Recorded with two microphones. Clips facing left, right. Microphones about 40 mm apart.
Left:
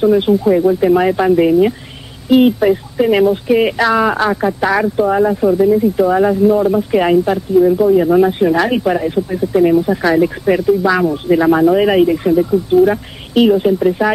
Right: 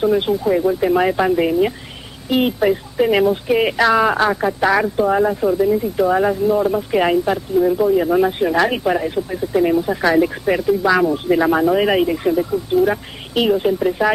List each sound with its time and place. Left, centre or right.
0.0 s speech: centre
5.3 s speech: left; by 12.4 s centre
12.4 s speech: centre
12.8 s speech: centre